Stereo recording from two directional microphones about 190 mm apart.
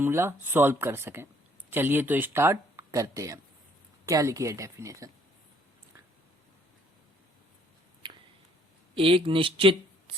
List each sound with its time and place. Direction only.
0.0 s speech: 15° right (ahead or behind)
9.0 s speech: 30° right (ahead or behind)